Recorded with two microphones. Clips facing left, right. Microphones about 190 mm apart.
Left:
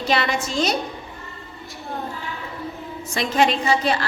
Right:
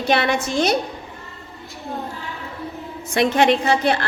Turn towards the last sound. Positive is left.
turn(degrees=-60)  # may be behind; listen again after turning